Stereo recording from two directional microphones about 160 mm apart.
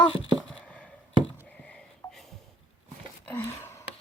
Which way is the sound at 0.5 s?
5° left (ahead or behind).